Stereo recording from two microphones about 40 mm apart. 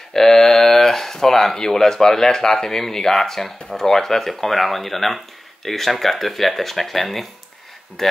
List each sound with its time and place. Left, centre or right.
0.1 s speech: centre